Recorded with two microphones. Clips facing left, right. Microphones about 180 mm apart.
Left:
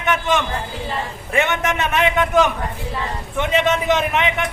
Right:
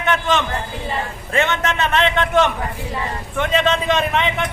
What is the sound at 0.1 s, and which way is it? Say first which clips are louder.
A man's voice: even; 15° left (ahead or behind).